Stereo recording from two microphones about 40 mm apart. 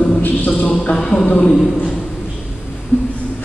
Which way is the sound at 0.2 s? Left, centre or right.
Left.